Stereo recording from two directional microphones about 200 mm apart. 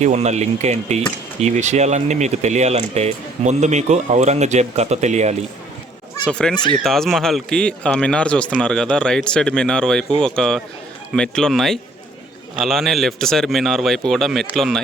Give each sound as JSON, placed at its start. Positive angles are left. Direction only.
{"t": 0.0, "sound": "speech", "side_deg": -35}
{"t": 6.2, "sound": "speech", "side_deg": 5}